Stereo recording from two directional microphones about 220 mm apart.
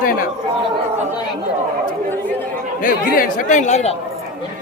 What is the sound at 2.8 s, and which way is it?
Speech, 35° left (ahead or behind).